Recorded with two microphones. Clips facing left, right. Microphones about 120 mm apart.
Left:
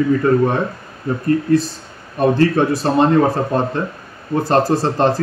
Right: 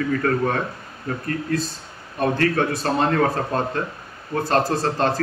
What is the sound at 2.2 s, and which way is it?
Speech, 30° left (ahead or behind).